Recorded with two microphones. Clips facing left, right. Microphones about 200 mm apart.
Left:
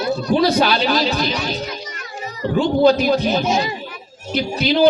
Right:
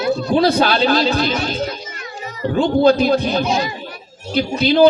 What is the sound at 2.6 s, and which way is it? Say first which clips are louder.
Speech: right 1 dB; 55° right (ahead or behind).